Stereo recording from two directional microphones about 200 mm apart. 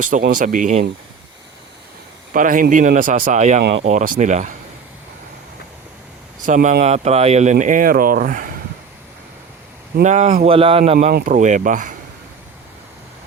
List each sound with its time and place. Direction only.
0.0 s speech: 45° right (ahead or behind)
2.3 s speech: 40° right (ahead or behind)
3.6 s speech: 55° right (ahead or behind)
3.8 s speech: 40° right (ahead or behind)
6.4 s speech: 40° right (ahead or behind)
10.0 s speech: 35° right (ahead or behind)
10.9 s speech: 40° right (ahead or behind)